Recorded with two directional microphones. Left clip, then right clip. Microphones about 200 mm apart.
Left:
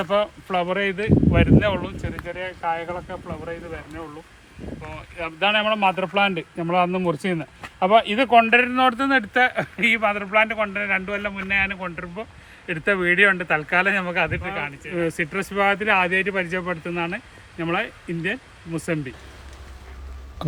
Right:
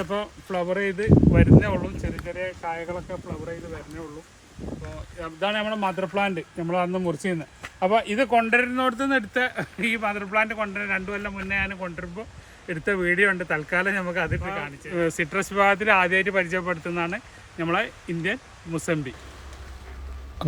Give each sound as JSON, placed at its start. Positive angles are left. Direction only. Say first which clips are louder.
{"t": 0.0, "sound": "speech", "louder": "left 7 dB", "side_deg": 10}
{"t": 5.5, "sound": "speech", "louder": "left 7 dB", "side_deg": 15}
{"t": 8.8, "sound": "speech", "louder": "left 5 dB", "side_deg": 40}
{"t": 9.6, "sound": "a man's voice", "louder": "left 6 dB", "side_deg": 10}
{"t": 14.9, "sound": "speech", "louder": "even", "side_deg": -10}